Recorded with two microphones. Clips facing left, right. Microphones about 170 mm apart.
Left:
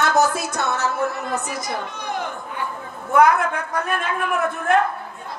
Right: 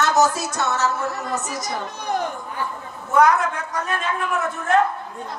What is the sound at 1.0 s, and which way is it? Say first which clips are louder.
Speech: left 2 dB; 55° left (ahead or behind).